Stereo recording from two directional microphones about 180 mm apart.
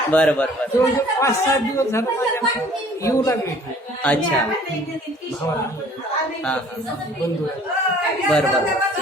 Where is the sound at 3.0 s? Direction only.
15° left (ahead or behind).